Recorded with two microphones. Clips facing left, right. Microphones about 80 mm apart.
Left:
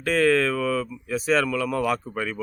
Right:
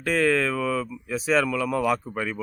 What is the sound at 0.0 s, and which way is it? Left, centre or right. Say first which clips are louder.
Speech: left 2 dB; centre.